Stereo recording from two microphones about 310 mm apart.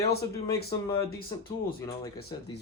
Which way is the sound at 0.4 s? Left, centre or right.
Centre.